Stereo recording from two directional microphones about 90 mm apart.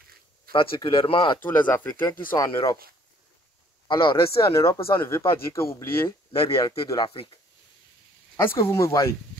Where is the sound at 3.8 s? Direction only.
60° left (ahead or behind).